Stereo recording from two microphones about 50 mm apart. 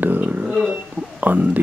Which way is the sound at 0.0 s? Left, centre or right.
Right.